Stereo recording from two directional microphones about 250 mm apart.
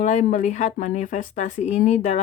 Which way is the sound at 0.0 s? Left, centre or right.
Left.